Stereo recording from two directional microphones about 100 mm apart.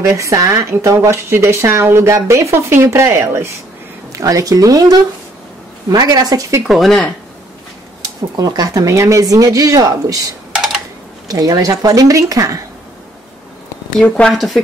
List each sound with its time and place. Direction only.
0.0 s speech: 30° right (ahead or behind)
6.7 s speech: 5° left (ahead or behind)
8.4 s speech: 40° right (ahead or behind)
10.5 s computer keyboard: 5° right (ahead or behind)
11.2 s speech: 35° right (ahead or behind)
14.0 s speech: 15° left (ahead or behind)
14.3 s speech: 5° left (ahead or behind)